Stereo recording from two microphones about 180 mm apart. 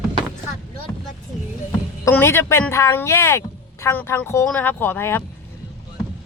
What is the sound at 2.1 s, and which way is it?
Speech, 15° left (ahead or behind).